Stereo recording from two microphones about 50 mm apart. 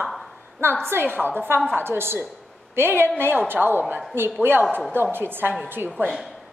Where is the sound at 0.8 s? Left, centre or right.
Right.